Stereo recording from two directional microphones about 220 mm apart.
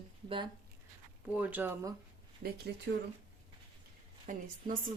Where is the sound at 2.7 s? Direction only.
50° right (ahead or behind).